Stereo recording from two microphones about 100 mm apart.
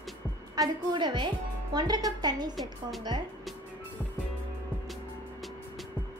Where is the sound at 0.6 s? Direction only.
40° right (ahead or behind).